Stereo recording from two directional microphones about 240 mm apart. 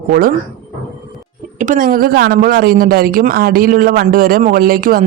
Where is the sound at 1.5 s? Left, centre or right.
Right.